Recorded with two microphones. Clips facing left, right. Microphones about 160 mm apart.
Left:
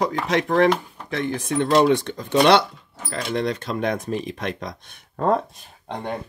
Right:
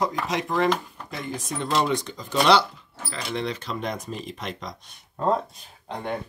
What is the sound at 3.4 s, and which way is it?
Speech, 50° left (ahead or behind).